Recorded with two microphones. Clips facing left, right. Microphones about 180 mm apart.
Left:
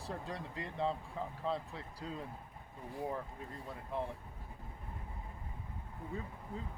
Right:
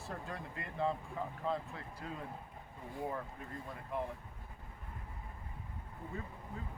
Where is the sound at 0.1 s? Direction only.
25° left (ahead or behind).